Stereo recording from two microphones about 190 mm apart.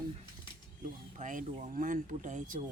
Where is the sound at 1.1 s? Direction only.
45° right (ahead or behind).